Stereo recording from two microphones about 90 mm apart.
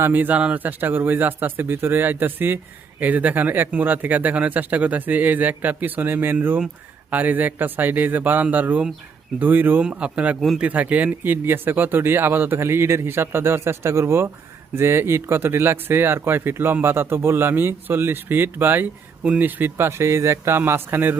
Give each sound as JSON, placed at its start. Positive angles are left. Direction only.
{"t": 0.0, "sound": "speech", "side_deg": -20}